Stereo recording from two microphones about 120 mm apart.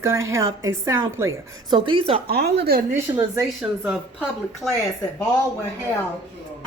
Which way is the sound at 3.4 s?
5° right (ahead or behind).